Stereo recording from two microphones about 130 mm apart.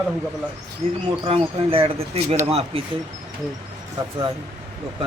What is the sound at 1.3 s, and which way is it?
Speech, 45° right (ahead or behind).